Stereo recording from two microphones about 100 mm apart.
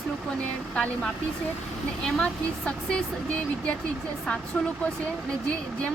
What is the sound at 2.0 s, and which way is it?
Speech, 5° left (ahead or behind).